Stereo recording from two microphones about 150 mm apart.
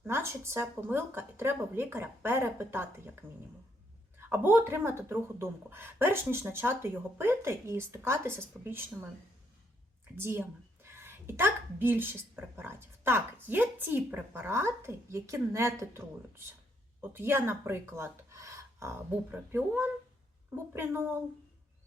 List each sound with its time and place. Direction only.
0.0 s a woman's voice: 15° right (ahead or behind)
10.2 s a woman's voice: 15° right (ahead or behind)